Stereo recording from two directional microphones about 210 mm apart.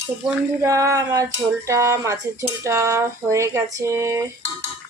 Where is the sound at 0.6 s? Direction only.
15° right (ahead or behind).